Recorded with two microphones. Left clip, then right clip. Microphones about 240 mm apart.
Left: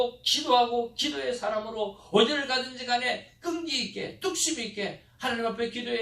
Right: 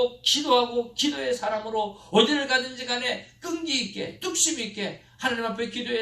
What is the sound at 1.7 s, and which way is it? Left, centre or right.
A man's voice, right.